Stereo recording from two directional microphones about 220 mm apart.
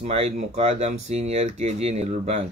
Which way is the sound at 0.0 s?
30° right (ahead or behind).